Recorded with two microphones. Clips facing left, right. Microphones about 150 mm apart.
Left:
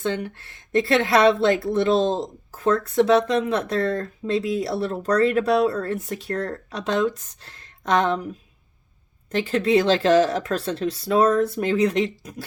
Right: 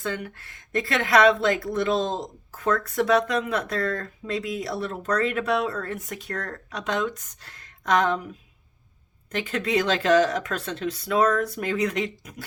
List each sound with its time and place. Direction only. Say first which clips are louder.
0.0 s speech: left 5 dB; 25° left (ahead or behind)
9.3 s speech: left 6 dB; 30° left (ahead or behind)